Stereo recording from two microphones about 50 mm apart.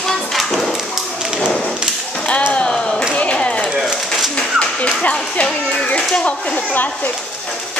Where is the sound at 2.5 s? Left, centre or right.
Centre.